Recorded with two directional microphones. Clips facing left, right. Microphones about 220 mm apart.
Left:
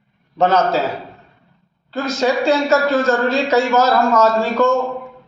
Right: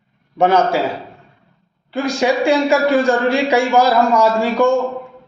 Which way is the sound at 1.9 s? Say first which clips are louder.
Right 1 dB; 15° right (ahead or behind).